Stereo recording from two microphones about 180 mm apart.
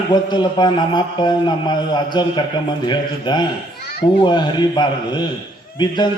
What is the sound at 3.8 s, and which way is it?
Children playing, 60° left (ahead or behind).